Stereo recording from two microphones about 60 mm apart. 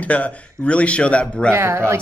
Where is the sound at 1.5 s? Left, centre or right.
Right.